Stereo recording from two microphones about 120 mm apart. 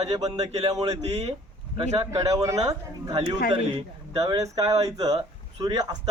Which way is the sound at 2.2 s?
30° right (ahead or behind).